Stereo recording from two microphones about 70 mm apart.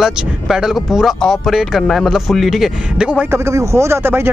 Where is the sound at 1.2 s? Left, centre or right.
Centre.